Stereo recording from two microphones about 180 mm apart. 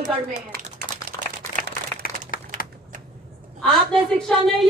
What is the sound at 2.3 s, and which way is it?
Typing, 50° left (ahead or behind).